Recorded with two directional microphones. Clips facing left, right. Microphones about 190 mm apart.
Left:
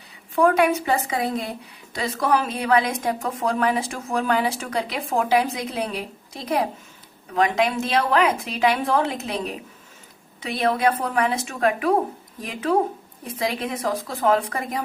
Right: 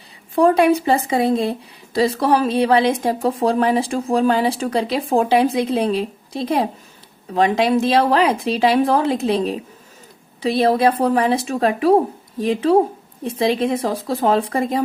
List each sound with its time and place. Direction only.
0.3 s speech: 30° right (ahead or behind)